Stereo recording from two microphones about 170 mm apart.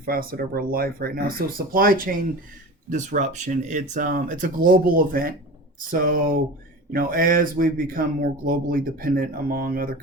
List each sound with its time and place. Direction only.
0.0 s speech: 60° right (ahead or behind)
2.9 s speech: 45° right (ahead or behind)